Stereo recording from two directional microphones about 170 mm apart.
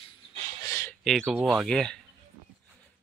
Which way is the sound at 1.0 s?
Centre (ahead or behind).